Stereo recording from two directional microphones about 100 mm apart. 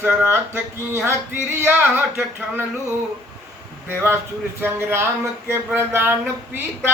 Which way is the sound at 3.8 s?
25° right (ahead or behind).